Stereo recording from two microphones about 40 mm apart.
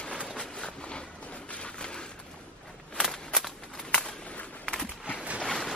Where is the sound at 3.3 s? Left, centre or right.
Centre.